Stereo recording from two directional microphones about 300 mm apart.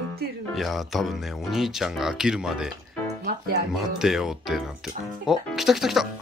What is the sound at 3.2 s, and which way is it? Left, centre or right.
Music, right.